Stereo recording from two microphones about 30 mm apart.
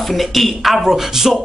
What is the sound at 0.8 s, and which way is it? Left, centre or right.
Speech, centre.